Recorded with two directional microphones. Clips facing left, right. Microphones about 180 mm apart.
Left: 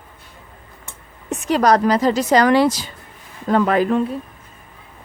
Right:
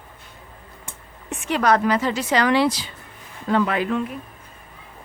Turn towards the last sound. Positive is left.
turn(degrees=35)  # may be behind; listen again after turning